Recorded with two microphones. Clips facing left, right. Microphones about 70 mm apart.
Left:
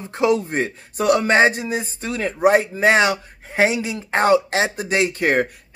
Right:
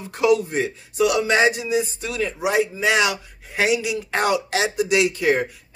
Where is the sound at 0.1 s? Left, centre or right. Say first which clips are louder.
Even; left.